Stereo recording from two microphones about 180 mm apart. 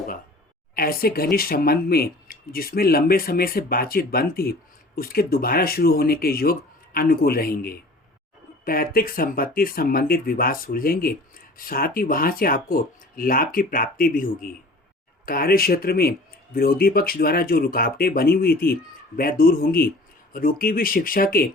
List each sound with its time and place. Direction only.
0.7 s speech: 55° left (ahead or behind)